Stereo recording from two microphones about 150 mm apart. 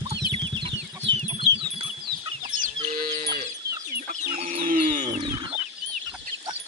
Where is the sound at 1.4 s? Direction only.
35° right (ahead or behind).